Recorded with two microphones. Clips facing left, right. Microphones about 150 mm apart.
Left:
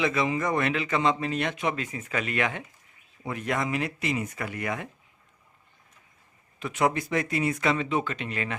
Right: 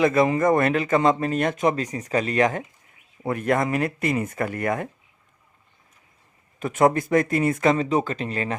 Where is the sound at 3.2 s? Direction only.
50° right (ahead or behind).